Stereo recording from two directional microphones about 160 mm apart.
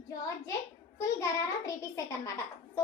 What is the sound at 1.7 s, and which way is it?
Speech, 20° left (ahead or behind).